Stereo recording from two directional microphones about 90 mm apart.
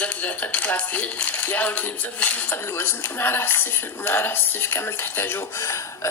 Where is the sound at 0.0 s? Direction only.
15° left (ahead or behind).